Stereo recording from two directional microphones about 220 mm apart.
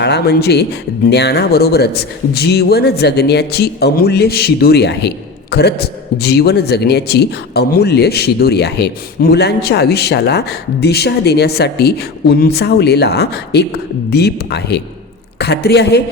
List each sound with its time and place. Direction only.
0.0 s speech: 50° left (ahead or behind)